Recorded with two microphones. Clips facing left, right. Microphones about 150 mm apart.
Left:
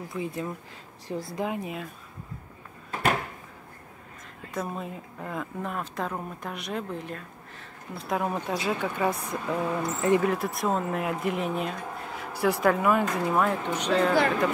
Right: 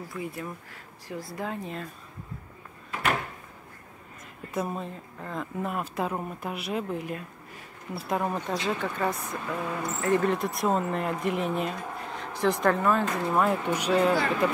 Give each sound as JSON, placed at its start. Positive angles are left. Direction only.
{"t": 0.1, "sound": "speech", "side_deg": 20}
{"t": 4.6, "sound": "speech", "side_deg": -5}
{"t": 4.8, "sound": "speech", "side_deg": 5}
{"t": 10.3, "sound": "speech", "side_deg": 0}
{"t": 13.3, "sound": "speech", "side_deg": -5}